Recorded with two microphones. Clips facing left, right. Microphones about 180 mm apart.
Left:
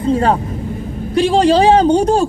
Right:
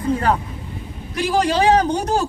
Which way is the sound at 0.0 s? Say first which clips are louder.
Left 5 dB; 25° left (ahead or behind).